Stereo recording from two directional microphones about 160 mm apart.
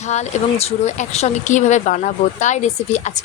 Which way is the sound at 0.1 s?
45° left (ahead or behind).